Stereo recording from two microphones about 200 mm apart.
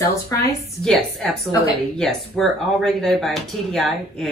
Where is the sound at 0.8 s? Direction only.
5° left (ahead or behind).